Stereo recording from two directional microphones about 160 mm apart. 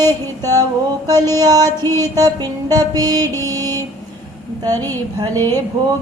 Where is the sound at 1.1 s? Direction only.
25° right (ahead or behind).